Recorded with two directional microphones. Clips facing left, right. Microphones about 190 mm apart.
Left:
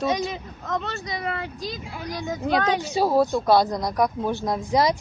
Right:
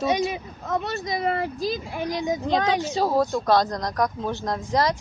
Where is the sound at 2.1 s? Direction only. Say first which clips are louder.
Right 4 dB; 15° right (ahead or behind).